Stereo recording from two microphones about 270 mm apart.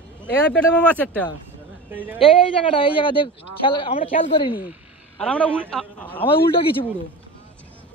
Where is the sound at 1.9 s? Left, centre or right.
Centre.